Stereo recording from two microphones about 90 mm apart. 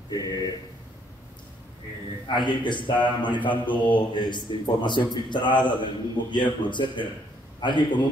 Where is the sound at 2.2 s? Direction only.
60° left (ahead or behind).